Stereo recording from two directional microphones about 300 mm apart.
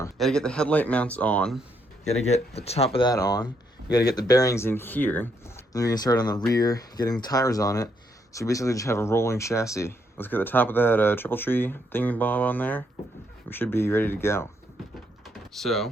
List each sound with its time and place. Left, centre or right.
0.0 s speech: centre
2.0 s speech: left
15.5 s speech: centre